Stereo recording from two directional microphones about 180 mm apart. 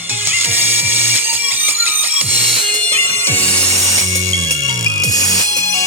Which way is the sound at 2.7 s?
10° left (ahead or behind).